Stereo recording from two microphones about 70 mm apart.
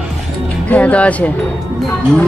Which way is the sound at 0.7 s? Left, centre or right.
Centre.